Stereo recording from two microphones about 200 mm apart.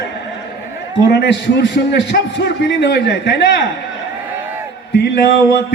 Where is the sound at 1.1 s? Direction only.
55° left (ahead or behind).